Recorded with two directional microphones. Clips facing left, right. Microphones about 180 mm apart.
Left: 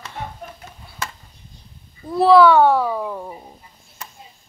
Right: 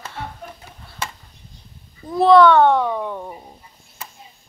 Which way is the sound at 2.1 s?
5° left (ahead or behind).